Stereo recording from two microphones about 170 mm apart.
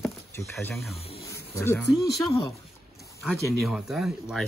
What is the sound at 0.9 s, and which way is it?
Speech, 35° left (ahead or behind).